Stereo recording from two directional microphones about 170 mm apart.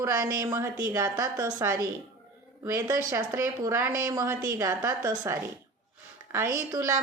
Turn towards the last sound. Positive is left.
turn(degrees=-20)  # may be behind; listen again after turning